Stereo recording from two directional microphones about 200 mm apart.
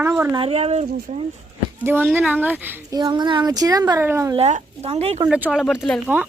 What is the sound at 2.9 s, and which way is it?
A child's voice, 20° right (ahead or behind).